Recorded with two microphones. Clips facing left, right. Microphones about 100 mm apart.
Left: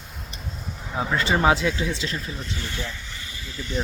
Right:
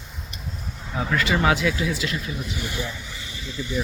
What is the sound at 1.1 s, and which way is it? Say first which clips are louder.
Speech: left 1 dB; 30° left (ahead or behind).